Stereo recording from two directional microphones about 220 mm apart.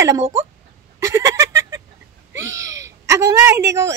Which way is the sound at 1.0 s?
15° right (ahead or behind).